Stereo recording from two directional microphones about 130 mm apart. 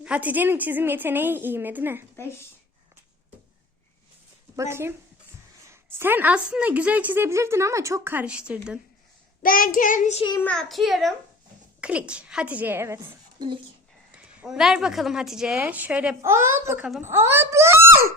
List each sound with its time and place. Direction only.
0.0 s a woman's voice: 10° right (ahead or behind)
4.5 s a woman's voice: 20° right (ahead or behind)
9.4 s child singing: 90° left
10.5 s a child's voice: 5° left (ahead or behind); by 13.0 s 20° right (ahead or behind)
13.1 s a woman's voice: 40° right (ahead or behind)
14.2 s a woman's voice: 5° right (ahead or behind)